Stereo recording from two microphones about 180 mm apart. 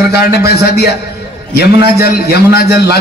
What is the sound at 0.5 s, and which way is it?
Speech, 65° left (ahead or behind).